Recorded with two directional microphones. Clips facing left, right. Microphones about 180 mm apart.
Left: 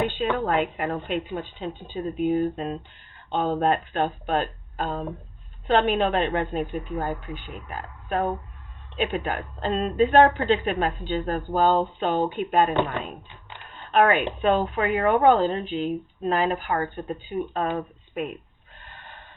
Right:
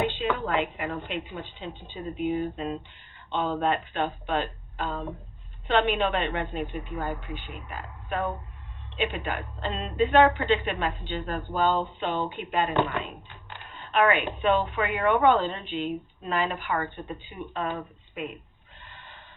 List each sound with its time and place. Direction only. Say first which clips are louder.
0.2 s speech: left 3 dB; 50° left (ahead or behind)
13.9 s a woman's voice: left 3 dB; 45° left (ahead or behind)
18.8 s a sound: left 3 dB; 50° left (ahead or behind)